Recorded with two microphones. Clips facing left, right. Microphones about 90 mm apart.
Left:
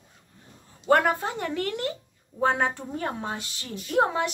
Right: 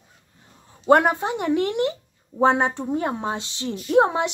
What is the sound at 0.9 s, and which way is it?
A woman's voice, 20° right (ahead or behind).